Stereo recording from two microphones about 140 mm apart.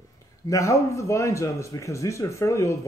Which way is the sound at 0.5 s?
20° left (ahead or behind).